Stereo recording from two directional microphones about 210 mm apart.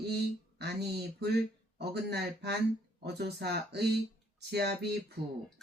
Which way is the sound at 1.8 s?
55° right (ahead or behind).